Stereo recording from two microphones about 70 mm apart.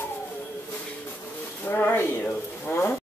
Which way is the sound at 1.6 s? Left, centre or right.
Left.